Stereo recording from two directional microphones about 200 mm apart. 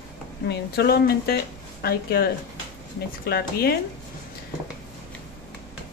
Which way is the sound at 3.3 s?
50° left (ahead or behind).